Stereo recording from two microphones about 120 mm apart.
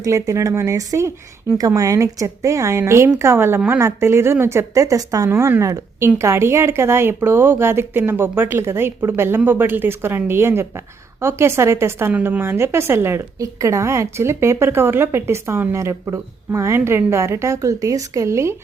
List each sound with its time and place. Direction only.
0.0 s a woman's voice: 25° right (ahead or behind)